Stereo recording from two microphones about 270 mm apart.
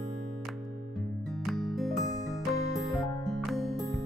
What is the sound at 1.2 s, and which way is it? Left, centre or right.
Music, centre.